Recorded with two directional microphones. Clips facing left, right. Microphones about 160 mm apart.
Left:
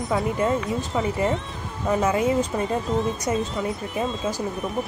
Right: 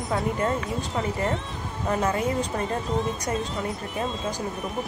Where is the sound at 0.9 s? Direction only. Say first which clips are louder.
Left 3 dB; centre (ahead or behind).